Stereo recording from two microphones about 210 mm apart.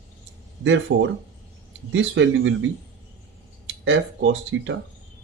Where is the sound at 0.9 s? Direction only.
55° right (ahead or behind).